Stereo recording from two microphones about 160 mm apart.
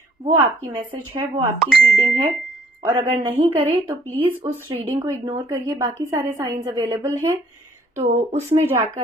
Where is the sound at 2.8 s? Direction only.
20° right (ahead or behind).